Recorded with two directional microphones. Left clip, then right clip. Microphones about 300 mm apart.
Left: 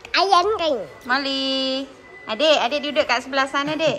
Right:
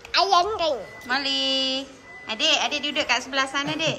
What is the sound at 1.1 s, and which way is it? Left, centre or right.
Speech, centre.